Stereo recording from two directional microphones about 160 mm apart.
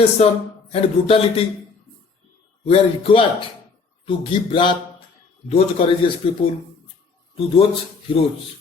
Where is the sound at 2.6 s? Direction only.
35° left (ahead or behind).